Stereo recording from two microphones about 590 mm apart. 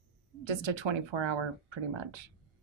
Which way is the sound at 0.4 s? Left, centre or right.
Right.